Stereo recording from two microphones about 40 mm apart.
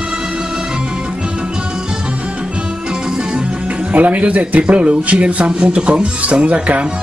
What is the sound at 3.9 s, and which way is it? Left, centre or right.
Speech, right.